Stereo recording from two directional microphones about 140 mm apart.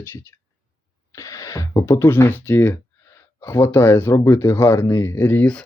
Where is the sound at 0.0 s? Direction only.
15° left (ahead or behind).